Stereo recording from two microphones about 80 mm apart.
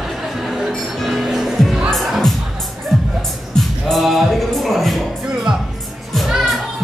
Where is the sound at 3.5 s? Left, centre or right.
Centre.